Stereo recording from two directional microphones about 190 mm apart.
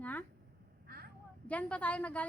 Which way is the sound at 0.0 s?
10° left (ahead or behind).